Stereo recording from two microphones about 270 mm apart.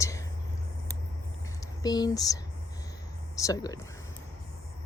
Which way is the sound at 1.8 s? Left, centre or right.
Centre.